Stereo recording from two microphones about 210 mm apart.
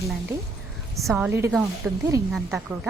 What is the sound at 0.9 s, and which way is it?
A woman's voice, 15° right (ahead or behind).